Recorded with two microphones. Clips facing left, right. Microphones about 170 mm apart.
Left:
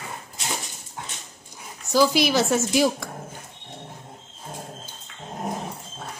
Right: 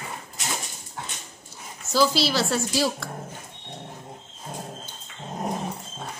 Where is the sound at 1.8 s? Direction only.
15° left (ahead or behind).